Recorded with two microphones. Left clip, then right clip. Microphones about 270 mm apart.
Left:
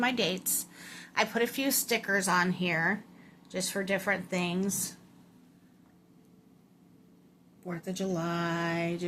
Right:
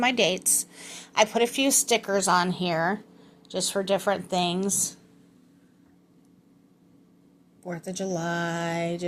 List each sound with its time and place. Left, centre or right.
0.0 s a woman's voice: right
7.6 s a woman's voice: centre